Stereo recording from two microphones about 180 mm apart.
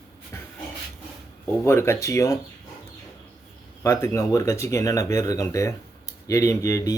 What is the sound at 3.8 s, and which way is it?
Speech, 15° left (ahead or behind).